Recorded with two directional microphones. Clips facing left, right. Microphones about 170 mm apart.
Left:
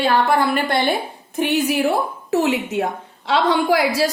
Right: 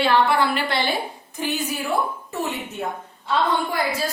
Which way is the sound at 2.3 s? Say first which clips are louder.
Left 13 dB; 90° left.